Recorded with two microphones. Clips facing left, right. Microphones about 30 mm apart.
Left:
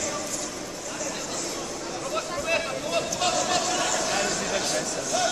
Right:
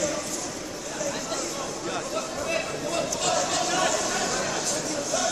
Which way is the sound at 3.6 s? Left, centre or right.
Centre.